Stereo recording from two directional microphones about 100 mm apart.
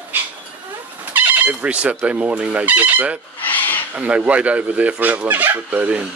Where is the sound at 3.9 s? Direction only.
15° right (ahead or behind).